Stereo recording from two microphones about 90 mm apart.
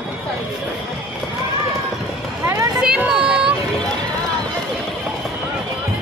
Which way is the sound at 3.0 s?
10° right (ahead or behind).